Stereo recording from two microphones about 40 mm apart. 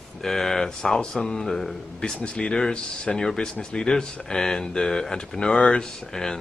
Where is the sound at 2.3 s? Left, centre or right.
Left.